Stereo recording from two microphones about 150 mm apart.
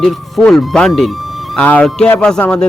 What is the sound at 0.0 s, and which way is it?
A man's voice, centre (ahead or behind).